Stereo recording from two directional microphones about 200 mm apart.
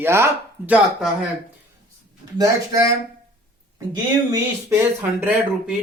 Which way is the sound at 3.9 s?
15° right (ahead or behind).